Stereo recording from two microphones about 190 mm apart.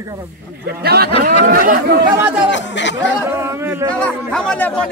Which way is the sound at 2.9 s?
15° right (ahead or behind).